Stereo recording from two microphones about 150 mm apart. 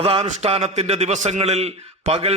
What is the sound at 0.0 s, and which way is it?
A man's voice, 40° right (ahead or behind).